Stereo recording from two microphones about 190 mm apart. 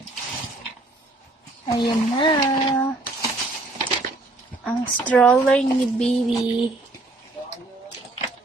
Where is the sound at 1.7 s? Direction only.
25° left (ahead or behind).